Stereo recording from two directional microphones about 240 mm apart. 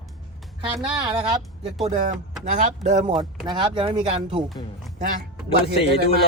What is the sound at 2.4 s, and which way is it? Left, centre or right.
Speech, right.